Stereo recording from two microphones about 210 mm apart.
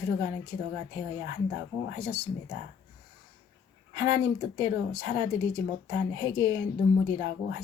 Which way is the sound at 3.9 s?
15° right (ahead or behind).